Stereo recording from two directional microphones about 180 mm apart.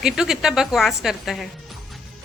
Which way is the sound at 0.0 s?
5° right (ahead or behind).